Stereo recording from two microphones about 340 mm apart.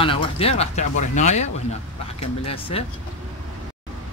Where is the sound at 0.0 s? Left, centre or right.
Centre.